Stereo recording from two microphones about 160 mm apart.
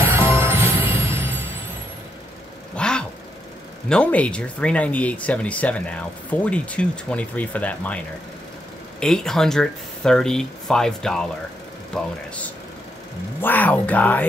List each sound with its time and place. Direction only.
0.0 s music: 15° right (ahead or behind)
2.7 s vehicle: 5° left (ahead or behind)
3.9 s speech: 10° left (ahead or behind)
9.0 s speech: 5° left (ahead or behind)
13.4 s speech: 10° left (ahead or behind)